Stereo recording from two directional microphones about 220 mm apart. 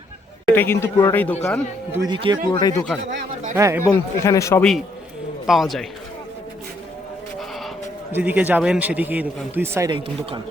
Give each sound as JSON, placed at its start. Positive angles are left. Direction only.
{"t": 0.4, "sound": "a man's voice", "side_deg": 10}
{"t": 1.9, "sound": "a man's voice", "side_deg": -20}
{"t": 2.5, "sound": "a man's voice", "side_deg": 20}
{"t": 3.5, "sound": "speech", "side_deg": -10}
{"t": 3.9, "sound": "a man's voice", "side_deg": 15}
{"t": 5.5, "sound": "a man's voice", "side_deg": 0}
{"t": 8.1, "sound": "speech", "side_deg": -5}